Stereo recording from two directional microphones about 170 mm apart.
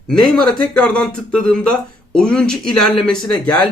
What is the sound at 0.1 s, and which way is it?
Speech, 5° left (ahead or behind).